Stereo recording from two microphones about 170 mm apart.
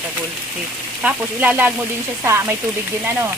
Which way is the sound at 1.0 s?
10° right (ahead or behind).